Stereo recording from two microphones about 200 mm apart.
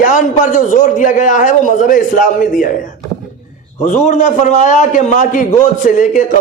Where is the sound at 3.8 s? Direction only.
40° left (ahead or behind).